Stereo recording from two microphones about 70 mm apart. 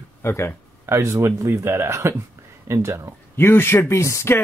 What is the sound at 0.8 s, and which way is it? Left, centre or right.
Speech, right.